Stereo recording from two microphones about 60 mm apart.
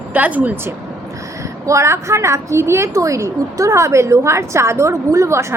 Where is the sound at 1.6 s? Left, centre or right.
Right.